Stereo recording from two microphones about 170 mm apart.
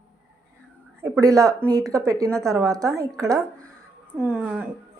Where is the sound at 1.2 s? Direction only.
20° right (ahead or behind).